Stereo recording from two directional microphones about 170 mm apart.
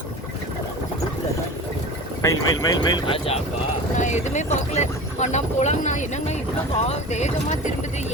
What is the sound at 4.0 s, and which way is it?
Speech, 45° left (ahead or behind).